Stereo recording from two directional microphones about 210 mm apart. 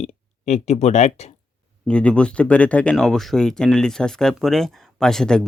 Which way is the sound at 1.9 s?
5° left (ahead or behind).